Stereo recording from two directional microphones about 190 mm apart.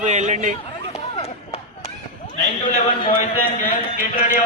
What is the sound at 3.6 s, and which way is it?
Speech, 45° left (ahead or behind).